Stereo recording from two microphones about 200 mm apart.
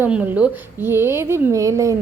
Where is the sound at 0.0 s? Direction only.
10° right (ahead or behind).